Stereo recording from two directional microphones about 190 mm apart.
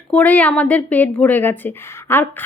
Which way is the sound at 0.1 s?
5° left (ahead or behind).